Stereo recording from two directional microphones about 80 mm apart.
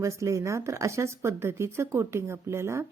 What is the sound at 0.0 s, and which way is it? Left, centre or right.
Speech, right.